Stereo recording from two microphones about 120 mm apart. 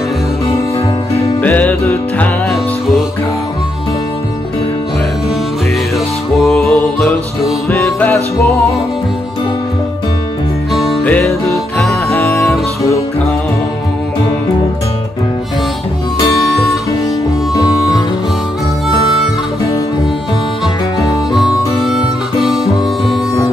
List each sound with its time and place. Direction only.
1.4 s music: 15° left (ahead or behind)
6.3 s music: centre (ahead or behind)
7.7 s music: 20° left (ahead or behind)
10.7 s music: centre (ahead or behind)
11.9 s music: 25° left (ahead or behind)
21.3 s harmonica: 5° right (ahead or behind)